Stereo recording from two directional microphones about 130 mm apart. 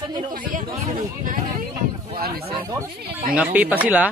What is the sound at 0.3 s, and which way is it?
Speech, 90° right.